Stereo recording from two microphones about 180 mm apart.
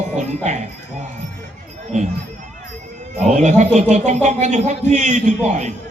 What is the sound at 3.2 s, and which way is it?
Speech, 40° right (ahead or behind).